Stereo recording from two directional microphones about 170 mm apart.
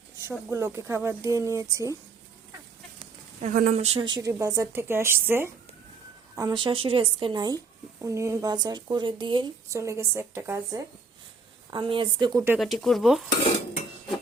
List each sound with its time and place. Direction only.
0.3 s speech: 15° right (ahead or behind)
3.0 s a sound: 45° right (ahead or behind)
3.8 s speech: 30° right (ahead or behind); by 5.5 s 15° right (ahead or behind)
6.3 s speech: 25° right (ahead or behind)
9.6 s speech: 15° right (ahead or behind)
11.7 s speech: 30° right (ahead or behind)
12.5 s speech: centre (ahead or behind)